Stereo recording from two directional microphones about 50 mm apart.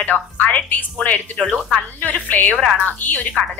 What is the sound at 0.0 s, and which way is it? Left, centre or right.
A woman's voice, left.